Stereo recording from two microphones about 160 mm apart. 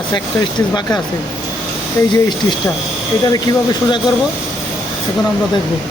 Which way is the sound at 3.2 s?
25° left (ahead or behind).